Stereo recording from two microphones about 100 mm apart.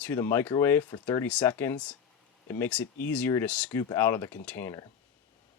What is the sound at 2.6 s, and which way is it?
Speech, 10° left (ahead or behind).